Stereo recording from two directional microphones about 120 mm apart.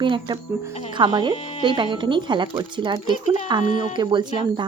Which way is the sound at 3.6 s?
90° left.